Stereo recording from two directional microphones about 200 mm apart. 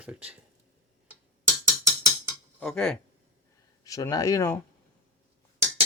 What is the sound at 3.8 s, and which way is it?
Speech, 15° left (ahead or behind).